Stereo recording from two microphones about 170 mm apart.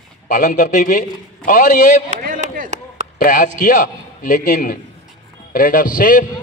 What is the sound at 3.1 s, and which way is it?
A man's voice, 50° left (ahead or behind).